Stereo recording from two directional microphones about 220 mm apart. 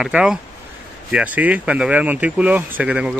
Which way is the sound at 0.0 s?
5° right (ahead or behind).